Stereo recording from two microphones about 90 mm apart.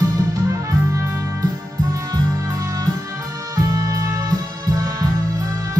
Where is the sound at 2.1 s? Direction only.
40° right (ahead or behind).